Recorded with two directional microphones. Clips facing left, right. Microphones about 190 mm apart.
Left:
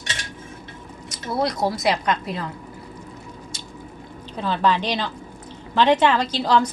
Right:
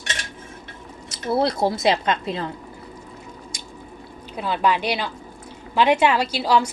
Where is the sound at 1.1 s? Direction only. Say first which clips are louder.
Right 3 dB; 30° right (ahead or behind).